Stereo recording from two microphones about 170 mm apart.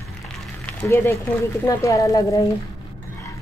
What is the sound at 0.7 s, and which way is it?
Speech, 15° left (ahead or behind).